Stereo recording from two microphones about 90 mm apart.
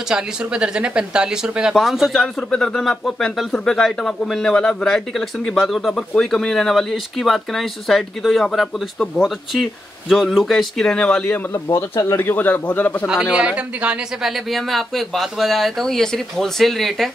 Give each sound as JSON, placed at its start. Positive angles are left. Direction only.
{"t": 0.1, "sound": "speech", "side_deg": -10}
{"t": 11.5, "sound": "a man's voice", "side_deg": 30}
{"t": 13.0, "sound": "speech", "side_deg": -5}
{"t": 14.5, "sound": "speech", "side_deg": 0}